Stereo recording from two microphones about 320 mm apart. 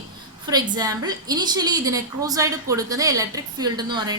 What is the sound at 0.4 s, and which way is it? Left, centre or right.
A woman's voice, centre.